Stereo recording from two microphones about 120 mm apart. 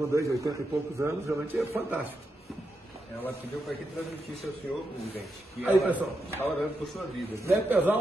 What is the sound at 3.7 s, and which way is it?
Speech, centre (ahead or behind).